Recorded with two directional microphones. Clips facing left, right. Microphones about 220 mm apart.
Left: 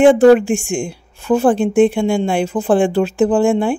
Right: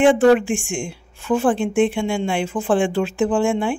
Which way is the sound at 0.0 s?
40° left (ahead or behind).